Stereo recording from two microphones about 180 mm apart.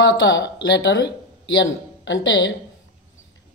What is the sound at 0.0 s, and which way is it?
Speech, 90° left.